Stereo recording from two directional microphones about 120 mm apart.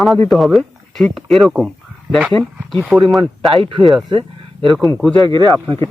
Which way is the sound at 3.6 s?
45° right (ahead or behind).